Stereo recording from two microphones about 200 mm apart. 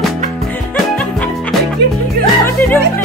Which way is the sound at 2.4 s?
10° left (ahead or behind).